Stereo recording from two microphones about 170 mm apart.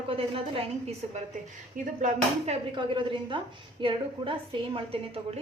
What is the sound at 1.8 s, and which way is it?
Speech, 50° right (ahead or behind).